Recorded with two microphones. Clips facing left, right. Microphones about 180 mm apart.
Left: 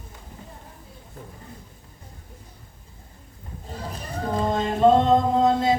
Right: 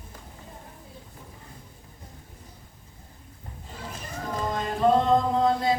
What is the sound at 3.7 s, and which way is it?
Music, 35° left (ahead or behind).